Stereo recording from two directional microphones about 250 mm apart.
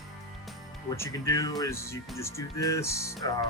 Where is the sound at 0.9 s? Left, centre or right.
Centre.